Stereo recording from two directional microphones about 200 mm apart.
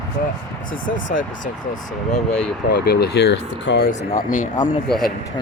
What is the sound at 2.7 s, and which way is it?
Speech, 50° left (ahead or behind).